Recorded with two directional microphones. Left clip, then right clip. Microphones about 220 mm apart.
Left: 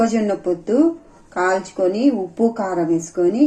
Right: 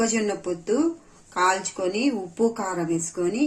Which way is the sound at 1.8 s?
10° right (ahead or behind).